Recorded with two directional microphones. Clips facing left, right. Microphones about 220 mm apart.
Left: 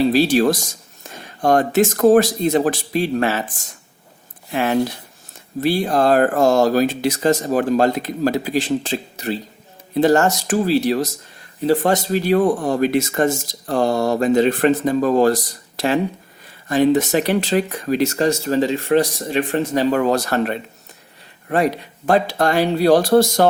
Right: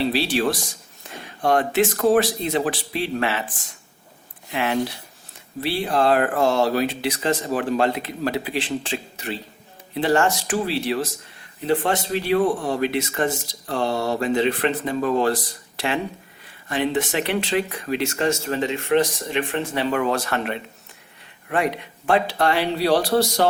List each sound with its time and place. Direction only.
0.0 s speech: 45° left (ahead or behind)
16.6 s speech: 40° left (ahead or behind)